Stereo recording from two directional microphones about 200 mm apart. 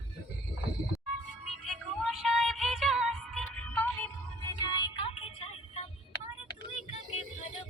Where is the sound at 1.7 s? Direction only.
Centre (ahead or behind).